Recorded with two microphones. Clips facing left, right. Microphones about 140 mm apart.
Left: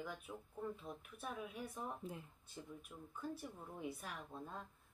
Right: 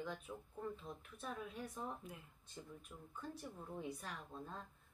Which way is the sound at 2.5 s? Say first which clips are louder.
Left 1 dB; 5° left (ahead or behind).